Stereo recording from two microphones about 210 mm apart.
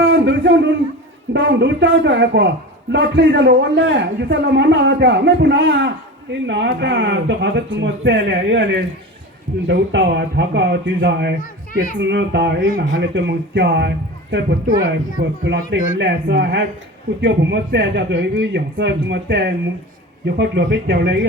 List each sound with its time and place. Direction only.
0.0 s a sound: 60° right (ahead or behind)
1.3 s a man's voice: 55° right (ahead or behind)
11.3 s a child's voice: 40° left (ahead or behind)
11.9 s a man's voice: 55° right (ahead or behind)